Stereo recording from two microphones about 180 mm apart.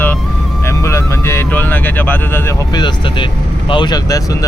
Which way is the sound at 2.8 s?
25° left (ahead or behind).